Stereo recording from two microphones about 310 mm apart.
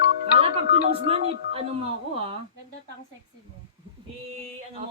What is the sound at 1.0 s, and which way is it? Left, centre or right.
A woman's voice, centre.